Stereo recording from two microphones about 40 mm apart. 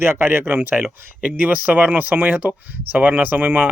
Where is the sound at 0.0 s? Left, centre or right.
Right.